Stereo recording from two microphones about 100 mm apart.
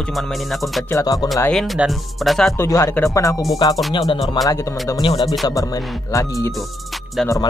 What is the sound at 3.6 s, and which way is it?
Speech, 45° left (ahead or behind).